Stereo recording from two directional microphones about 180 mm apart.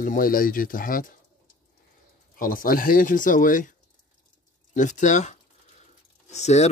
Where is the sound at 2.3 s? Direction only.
50° left (ahead or behind).